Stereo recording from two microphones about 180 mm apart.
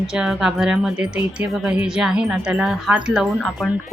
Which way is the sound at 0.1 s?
5° right (ahead or behind).